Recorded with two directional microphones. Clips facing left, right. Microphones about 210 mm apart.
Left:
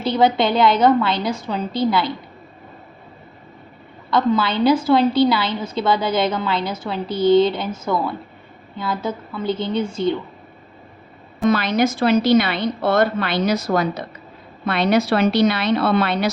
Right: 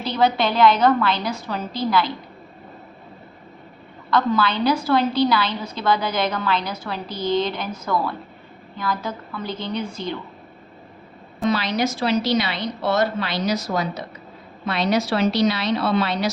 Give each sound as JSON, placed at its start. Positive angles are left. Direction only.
{"t": 0.0, "sound": "a woman's voice", "side_deg": 25}
{"t": 4.1, "sound": "a woman's voice", "side_deg": 25}
{"t": 11.4, "sound": "a woman's voice", "side_deg": 50}